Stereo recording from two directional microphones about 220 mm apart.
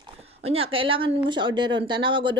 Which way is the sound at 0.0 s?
25° right (ahead or behind).